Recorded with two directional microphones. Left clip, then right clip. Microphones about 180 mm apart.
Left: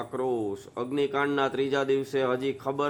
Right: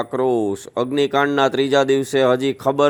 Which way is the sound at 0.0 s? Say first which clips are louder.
Right 10 dB; 40° right (ahead or behind).